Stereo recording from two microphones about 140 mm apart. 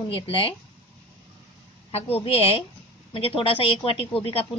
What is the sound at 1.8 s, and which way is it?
A woman's voice, 40° left (ahead or behind).